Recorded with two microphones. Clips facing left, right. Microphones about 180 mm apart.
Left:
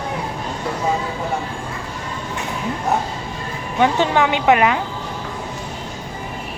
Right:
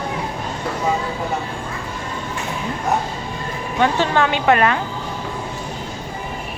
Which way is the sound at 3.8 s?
15° left (ahead or behind).